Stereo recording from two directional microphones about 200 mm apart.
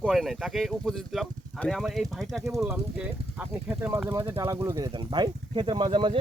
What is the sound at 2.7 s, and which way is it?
Speech, 10° right (ahead or behind).